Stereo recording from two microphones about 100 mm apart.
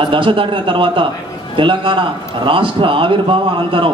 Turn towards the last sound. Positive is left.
turn(degrees=-60)  # may be behind; listen again after turning